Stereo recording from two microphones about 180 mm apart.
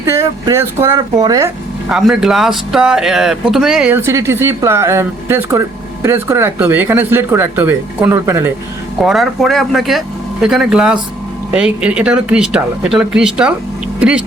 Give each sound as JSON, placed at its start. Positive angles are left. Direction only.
{"t": 0.0, "sound": "speech", "side_deg": -15}
{"t": 1.9, "sound": "speech", "side_deg": -5}
{"t": 9.0, "sound": "speech", "side_deg": 0}